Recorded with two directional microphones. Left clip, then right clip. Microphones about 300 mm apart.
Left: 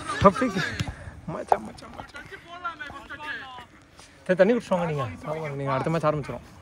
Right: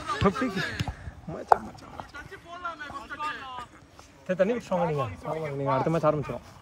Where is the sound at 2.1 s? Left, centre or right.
Right.